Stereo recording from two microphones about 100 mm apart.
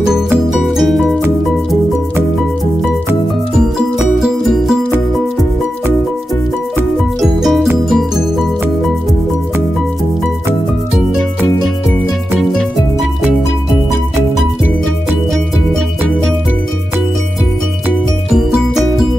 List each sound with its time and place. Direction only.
0.5 s music: centre (ahead or behind)
4.2 s music: 5° right (ahead or behind)
7.2 s music: centre (ahead or behind)